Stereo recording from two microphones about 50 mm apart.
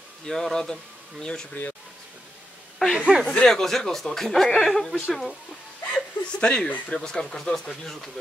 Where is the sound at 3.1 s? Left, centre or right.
Centre.